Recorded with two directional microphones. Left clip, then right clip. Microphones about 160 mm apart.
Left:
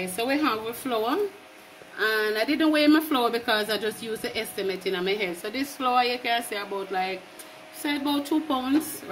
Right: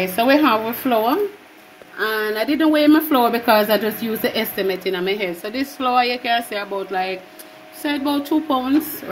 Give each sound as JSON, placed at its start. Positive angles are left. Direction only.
{"t": 0.1, "sound": "a woman's voice", "side_deg": -50}